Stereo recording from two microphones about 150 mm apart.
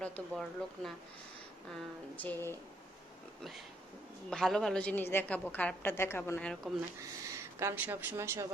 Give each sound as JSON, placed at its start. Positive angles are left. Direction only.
{"t": 0.0, "sound": "a woman's voice", "side_deg": 0}
{"t": 4.3, "sound": "a woman's voice", "side_deg": 5}
{"t": 6.5, "sound": "speech", "side_deg": 0}
{"t": 7.3, "sound": "speech", "side_deg": -15}